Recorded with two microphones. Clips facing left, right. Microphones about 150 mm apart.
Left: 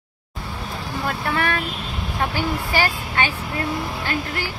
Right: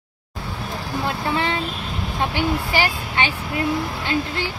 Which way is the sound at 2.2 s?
20° right (ahead or behind).